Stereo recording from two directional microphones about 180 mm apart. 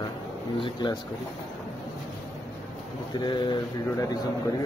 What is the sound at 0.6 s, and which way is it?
Speech, 25° left (ahead or behind).